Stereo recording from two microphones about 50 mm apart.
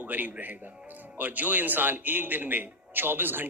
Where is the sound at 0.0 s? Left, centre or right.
Right.